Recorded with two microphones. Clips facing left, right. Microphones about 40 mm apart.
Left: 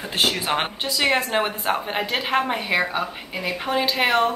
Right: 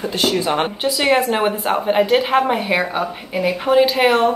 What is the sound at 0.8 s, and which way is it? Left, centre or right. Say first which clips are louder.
A woman's voice: right 6 dB; centre.